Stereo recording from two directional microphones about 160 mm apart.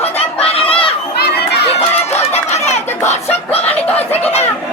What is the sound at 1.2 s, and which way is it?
Crowd, 85° left.